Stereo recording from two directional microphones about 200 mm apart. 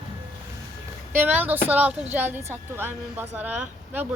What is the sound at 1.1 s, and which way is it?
A woman's voice, 10° right (ahead or behind).